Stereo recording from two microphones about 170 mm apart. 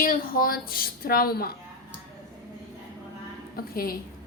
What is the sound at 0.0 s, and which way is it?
Female singing, 55° left (ahead or behind).